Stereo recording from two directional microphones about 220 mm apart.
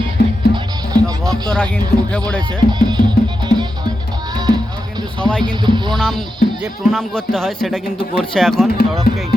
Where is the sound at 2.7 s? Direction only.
20° right (ahead or behind).